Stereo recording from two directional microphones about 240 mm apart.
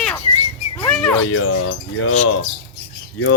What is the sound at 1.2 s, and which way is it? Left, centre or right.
Speech, left.